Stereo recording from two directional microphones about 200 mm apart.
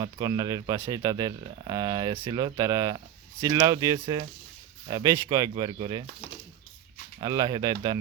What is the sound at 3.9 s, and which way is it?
Speech, 30° right (ahead or behind).